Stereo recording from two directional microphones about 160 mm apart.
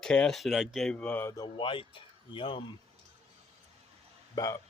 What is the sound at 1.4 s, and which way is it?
Speech, 30° left (ahead or behind).